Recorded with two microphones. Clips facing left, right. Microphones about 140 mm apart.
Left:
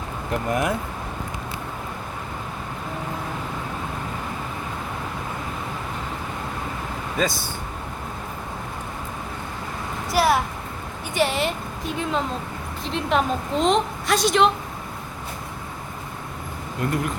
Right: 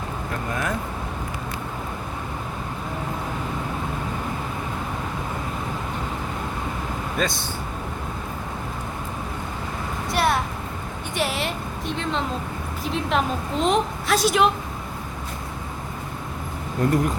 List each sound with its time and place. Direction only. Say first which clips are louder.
0.4 s speech: left 5 dB; 20° left (ahead or behind)
7.2 s a woman's voice: left 2 dB; centre (ahead or behind)
10.1 s a sound: left 3 dB; centre (ahead or behind)
11.1 s a woman's voice: left 4 dB; centre (ahead or behind)
12.8 s a woman's voice: left 1 dB; centre (ahead or behind)
16.8 s speech: right 4 dB; 40° right (ahead or behind)